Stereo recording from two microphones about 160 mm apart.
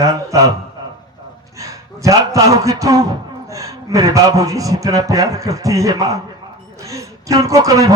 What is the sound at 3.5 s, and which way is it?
A man's voice, 20° right (ahead or behind).